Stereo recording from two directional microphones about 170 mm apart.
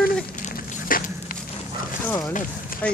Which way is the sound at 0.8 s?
55° left (ahead or behind).